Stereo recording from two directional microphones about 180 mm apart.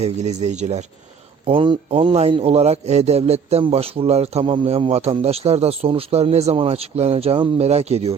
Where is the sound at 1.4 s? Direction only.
30° right (ahead or behind).